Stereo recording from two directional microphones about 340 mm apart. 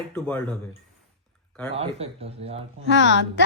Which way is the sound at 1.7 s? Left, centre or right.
Centre.